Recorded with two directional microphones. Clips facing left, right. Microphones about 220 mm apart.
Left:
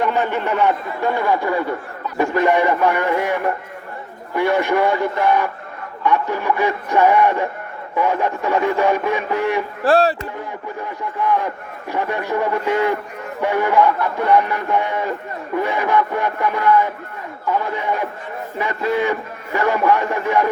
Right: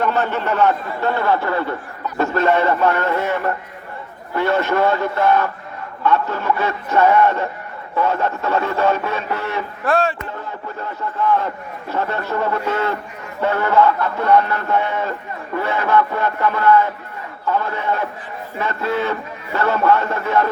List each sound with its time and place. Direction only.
0.0 s a man's voice: 15° left (ahead or behind)
9.8 s speech: 35° left (ahead or behind)
10.8 s a man's voice: 15° left (ahead or behind)